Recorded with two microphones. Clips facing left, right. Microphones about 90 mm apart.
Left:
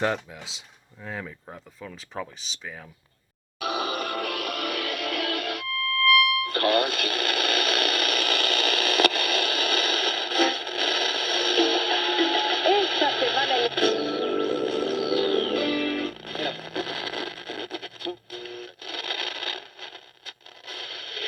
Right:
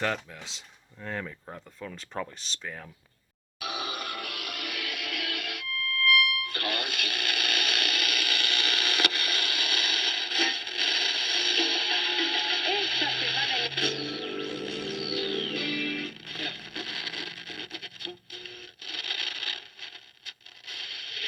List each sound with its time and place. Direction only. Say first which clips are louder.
0.0 s speech: left 4 dB; 15° left (ahead or behind)
3.6 s music: left 7 dB; 40° left (ahead or behind)
6.4 s radio: left 10 dB; 40° left (ahead or behind)